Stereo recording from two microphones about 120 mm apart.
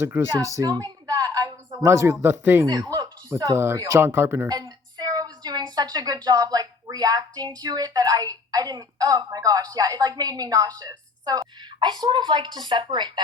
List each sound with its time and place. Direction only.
0.0 s speech: 20° right (ahead or behind)
0.3 s a sound: 30° right (ahead or behind)
1.8 s speech: 25° right (ahead or behind)
2.6 s speech: 35° right (ahead or behind)
4.4 s a woman's voice: 35° right (ahead or behind)